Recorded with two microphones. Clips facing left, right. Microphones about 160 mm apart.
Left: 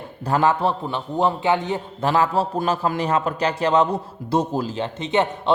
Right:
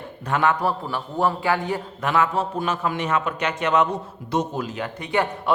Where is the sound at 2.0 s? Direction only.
30° left (ahead or behind).